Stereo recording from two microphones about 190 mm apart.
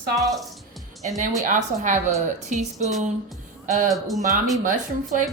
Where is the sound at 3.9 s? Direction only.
Centre (ahead or behind).